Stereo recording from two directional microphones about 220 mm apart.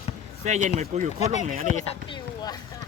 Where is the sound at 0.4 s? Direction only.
30° right (ahead or behind).